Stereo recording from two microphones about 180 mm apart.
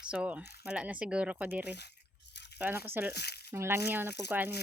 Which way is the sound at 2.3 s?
70° left (ahead or behind).